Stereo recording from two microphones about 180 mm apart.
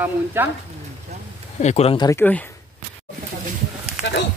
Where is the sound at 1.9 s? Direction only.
15° left (ahead or behind).